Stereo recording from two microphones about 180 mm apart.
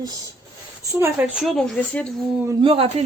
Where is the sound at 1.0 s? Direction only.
5° right (ahead or behind).